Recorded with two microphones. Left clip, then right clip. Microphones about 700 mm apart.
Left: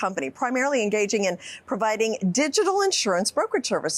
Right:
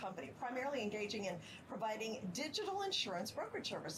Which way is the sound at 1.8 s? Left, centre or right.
Left.